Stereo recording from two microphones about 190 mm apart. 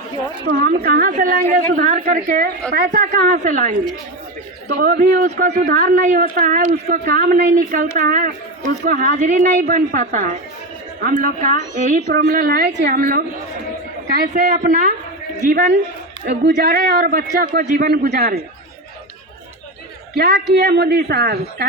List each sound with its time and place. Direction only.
0.4 s a woman's voice: 55° right (ahead or behind); by 14.8 s 40° right (ahead or behind)
16.6 s a woman's voice: 50° right (ahead or behind)
20.1 s a woman's voice: 55° right (ahead or behind)